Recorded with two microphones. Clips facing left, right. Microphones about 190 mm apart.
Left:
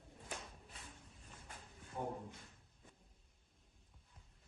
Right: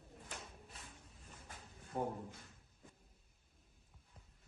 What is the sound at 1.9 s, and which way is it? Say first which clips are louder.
Speech: right 4 dB; 50° right (ahead or behind).